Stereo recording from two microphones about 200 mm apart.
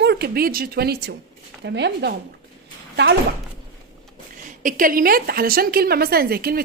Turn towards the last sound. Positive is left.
turn(degrees=-50)  # may be behind; listen again after turning